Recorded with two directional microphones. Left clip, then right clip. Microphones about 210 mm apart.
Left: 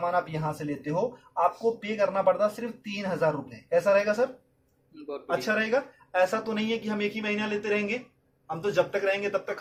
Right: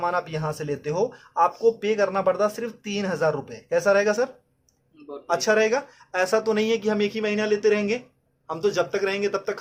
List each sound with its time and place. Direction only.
0.0 s speech: 50° right (ahead or behind)
5.3 s a man's voice: 45° right (ahead or behind)